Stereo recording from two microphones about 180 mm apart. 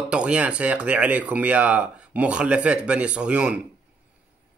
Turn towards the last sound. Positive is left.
turn(degrees=-5)  # may be behind; listen again after turning